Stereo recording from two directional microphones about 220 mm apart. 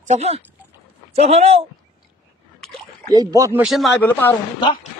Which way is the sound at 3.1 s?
15° right (ahead or behind).